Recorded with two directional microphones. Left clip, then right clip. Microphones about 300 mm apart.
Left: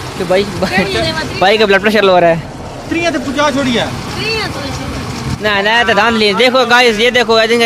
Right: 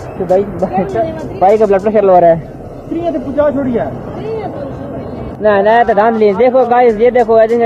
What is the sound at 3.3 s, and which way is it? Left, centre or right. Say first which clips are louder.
Speech: right 2 dB; left.